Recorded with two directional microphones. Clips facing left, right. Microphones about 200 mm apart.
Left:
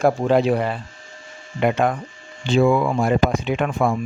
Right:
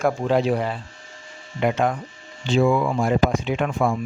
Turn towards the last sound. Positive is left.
turn(degrees=60)  # may be behind; listen again after turning